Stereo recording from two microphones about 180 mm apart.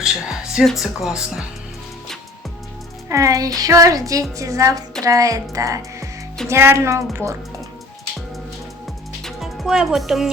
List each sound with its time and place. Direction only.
0.0 s speech: 5° right (ahead or behind)
3.1 s a woman's voice: 20° right (ahead or behind)
9.2 s music: centre (ahead or behind)